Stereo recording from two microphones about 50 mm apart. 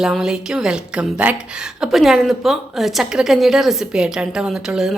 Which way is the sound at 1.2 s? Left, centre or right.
Right.